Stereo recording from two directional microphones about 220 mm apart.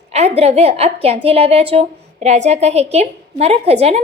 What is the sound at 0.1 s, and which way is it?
A woman's voice, 30° right (ahead or behind).